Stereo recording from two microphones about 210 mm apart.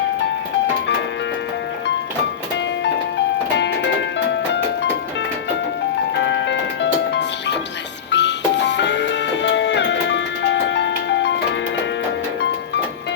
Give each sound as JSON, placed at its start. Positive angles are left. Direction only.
{"t": 6.1, "sound": "music", "side_deg": 55}